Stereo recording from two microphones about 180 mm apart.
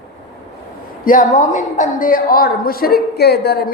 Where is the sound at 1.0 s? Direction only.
45° left (ahead or behind); by 3.7 s 60° left (ahead or behind).